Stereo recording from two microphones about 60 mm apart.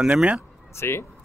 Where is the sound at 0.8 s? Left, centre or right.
Left.